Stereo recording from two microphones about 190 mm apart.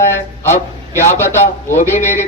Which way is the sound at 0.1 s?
10° left (ahead or behind).